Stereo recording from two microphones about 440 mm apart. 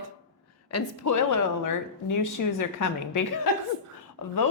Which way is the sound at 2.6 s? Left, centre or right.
Left.